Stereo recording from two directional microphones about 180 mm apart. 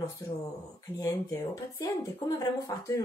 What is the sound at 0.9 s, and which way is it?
Speech, 20° left (ahead or behind).